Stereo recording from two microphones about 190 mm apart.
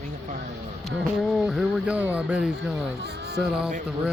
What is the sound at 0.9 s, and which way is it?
Speech, centre (ahead or behind).